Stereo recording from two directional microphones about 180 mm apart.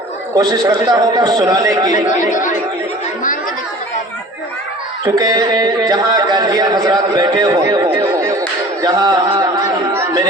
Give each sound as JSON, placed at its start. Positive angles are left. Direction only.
{"t": 0.3, "sound": "a man's voice", "side_deg": -20}
{"t": 2.3, "sound": "speech", "side_deg": 45}
{"t": 5.0, "sound": "a man's voice", "side_deg": -20}
{"t": 9.9, "sound": "chatter", "side_deg": -15}